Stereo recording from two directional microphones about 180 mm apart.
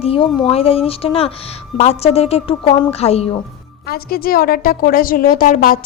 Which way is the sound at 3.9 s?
55° left (ahead or behind).